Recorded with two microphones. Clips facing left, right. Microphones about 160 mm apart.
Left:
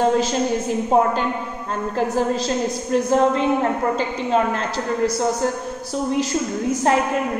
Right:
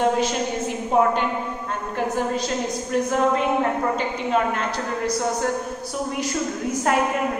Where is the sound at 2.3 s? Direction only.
30° left (ahead or behind).